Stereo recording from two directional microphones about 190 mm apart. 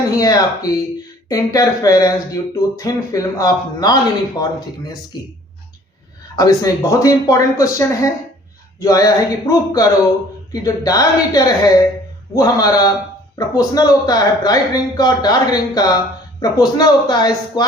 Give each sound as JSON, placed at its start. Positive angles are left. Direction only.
{"t": 0.2, "sound": "speech", "side_deg": 20}
{"t": 6.3, "sound": "speech", "side_deg": 20}